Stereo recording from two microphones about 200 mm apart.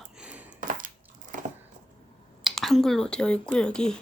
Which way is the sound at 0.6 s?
40° right (ahead or behind).